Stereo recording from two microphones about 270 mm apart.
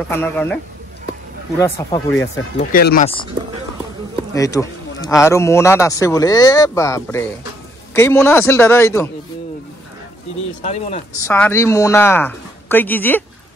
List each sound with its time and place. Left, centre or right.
0.1 s speech: centre
1.6 s speech: centre
2.6 s speech: left
4.3 s speech: centre
10.6 s speech: left
11.2 s speech: centre